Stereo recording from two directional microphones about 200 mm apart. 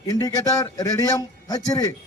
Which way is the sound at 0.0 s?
15° left (ahead or behind).